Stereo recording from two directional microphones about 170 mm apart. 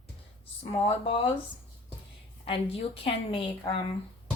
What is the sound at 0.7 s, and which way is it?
Speech, 35° left (ahead or behind).